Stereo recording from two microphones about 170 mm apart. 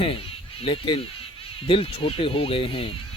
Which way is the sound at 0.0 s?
35° left (ahead or behind).